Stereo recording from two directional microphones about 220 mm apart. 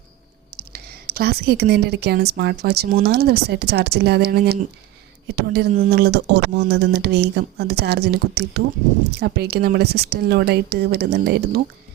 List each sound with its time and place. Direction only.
0.5 s speech: 45° right (ahead or behind)